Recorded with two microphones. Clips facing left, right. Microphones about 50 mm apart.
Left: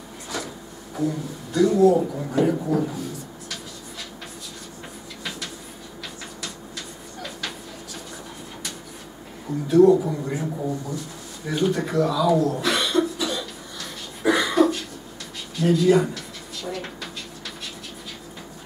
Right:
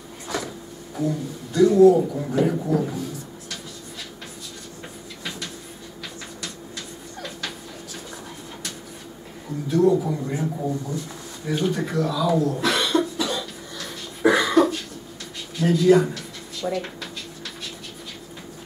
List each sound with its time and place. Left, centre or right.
0.9 s speech: centre
9.7 s speech: centre
12.8 s cough: centre
15.5 s speech: centre